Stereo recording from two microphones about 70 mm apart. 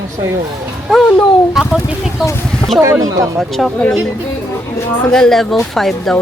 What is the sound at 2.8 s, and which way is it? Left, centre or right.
Speech, right.